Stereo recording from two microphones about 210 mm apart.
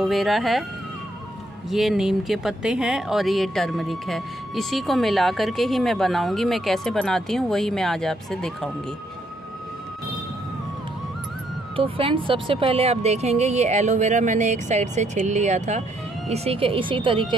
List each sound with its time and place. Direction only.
0.0 s speech: centre (ahead or behind)
1.7 s speech: centre (ahead or behind)
11.7 s speech: 25° right (ahead or behind)